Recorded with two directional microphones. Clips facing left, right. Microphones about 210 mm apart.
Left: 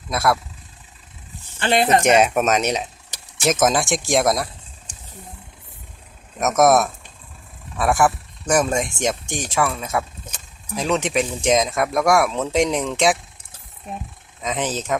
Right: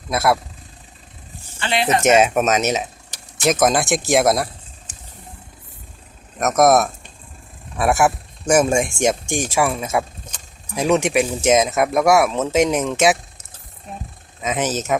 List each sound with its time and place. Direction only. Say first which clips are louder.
0.1 s speech: right 2 dB; 5° right (ahead or behind)
1.6 s speech: left 3 dB; 45° left (ahead or behind)
2.2 s speech: right 1 dB; centre (ahead or behind)
6.4 s speech: right 1 dB; centre (ahead or behind)
14.4 s speech: right 3 dB; 5° right (ahead or behind)